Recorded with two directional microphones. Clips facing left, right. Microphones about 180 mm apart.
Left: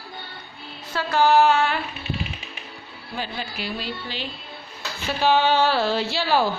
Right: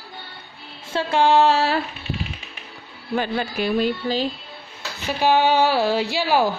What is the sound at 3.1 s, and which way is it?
Speech, 55° right (ahead or behind).